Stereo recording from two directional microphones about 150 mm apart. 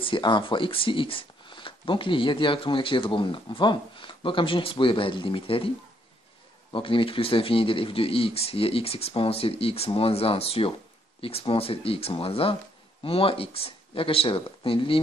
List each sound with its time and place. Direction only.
0.0 s speech: 35° left (ahead or behind)
6.7 s speech: 35° left (ahead or behind)